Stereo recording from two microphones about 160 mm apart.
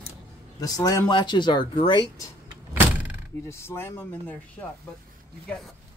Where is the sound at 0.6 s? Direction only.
20° left (ahead or behind).